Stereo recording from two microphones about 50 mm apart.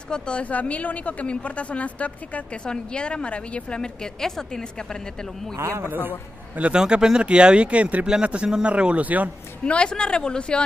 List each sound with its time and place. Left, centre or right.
0.1 s a woman's voice: centre
5.6 s a man's voice: right
5.9 s a man's voice: right
6.7 s speech: centre; by 9.3 s right
9.7 s a woman's voice: centre